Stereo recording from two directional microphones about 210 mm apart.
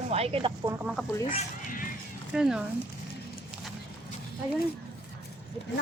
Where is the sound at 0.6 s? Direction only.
5° right (ahead or behind).